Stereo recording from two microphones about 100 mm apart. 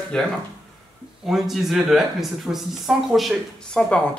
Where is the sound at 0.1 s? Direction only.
10° left (ahead or behind).